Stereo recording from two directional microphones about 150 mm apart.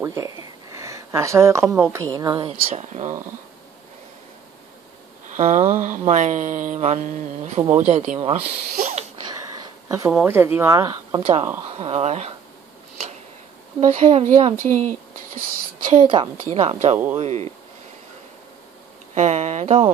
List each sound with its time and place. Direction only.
0.0 s speech: 20° right (ahead or behind)
2.7 s mantra: 50° right (ahead or behind)
5.3 s mantra: 50° right (ahead or behind)
8.7 s a sound: 55° right (ahead or behind)
9.1 s a sound: 30° right (ahead or behind)
9.8 s speech: 20° right (ahead or behind)
11.8 s mantra: 45° right (ahead or behind)
13.7 s mantra: 40° right (ahead or behind)
15.9 s a woman's voice: 35° right (ahead or behind)
16.5 s mantra: 45° right (ahead or behind)
19.1 s speech: 50° right (ahead or behind)